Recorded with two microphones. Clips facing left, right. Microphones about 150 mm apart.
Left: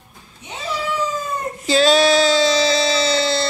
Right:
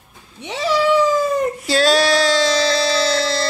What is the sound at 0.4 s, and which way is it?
Cat, 90° right.